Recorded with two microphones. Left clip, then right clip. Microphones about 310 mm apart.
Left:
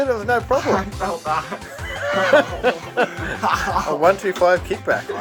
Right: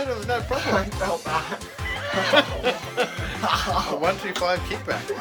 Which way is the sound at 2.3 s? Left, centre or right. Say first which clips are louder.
Left 3 dB; centre.